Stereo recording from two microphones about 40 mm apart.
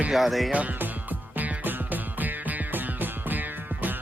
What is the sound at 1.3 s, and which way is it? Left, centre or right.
Music, right.